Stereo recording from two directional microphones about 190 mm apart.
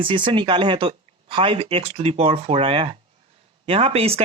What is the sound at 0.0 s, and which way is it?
Speech, 25° right (ahead or behind).